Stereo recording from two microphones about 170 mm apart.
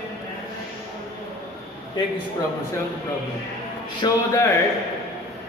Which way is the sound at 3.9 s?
20° left (ahead or behind).